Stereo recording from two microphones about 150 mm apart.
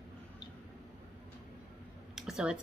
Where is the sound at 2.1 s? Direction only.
5° right (ahead or behind).